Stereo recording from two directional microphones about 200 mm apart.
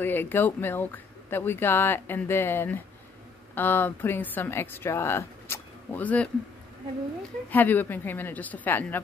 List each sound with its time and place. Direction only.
0.0 s speech: 10° left (ahead or behind)
7.4 s speech: 10° left (ahead or behind)